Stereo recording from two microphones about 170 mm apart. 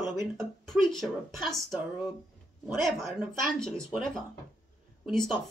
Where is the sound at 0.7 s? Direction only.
Centre (ahead or behind).